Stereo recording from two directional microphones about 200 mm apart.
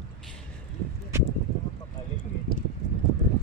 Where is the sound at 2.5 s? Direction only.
50° left (ahead or behind).